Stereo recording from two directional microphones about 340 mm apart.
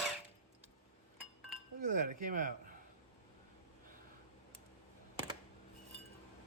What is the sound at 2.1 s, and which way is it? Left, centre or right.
Speech, right.